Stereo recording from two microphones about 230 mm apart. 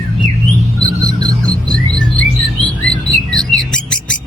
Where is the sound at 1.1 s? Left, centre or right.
Centre.